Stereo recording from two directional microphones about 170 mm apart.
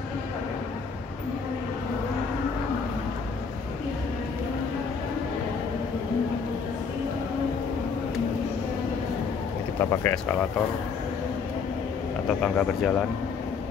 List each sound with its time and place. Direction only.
9.8 s speech: 15° left (ahead or behind)
12.3 s speech: 5° left (ahead or behind)